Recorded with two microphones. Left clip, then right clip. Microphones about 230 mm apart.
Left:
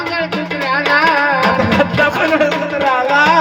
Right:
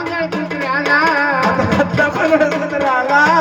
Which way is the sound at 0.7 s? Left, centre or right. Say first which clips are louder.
Left 1 dB; right.